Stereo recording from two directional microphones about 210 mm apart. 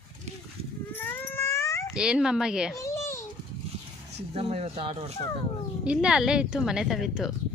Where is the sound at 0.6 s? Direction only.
30° right (ahead or behind).